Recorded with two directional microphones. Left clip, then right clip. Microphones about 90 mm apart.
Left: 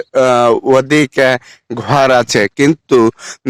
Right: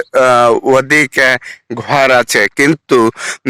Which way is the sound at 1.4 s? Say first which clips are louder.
Right 1 dB; 35° left (ahead or behind).